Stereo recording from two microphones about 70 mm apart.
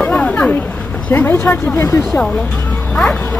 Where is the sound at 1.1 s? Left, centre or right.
Left.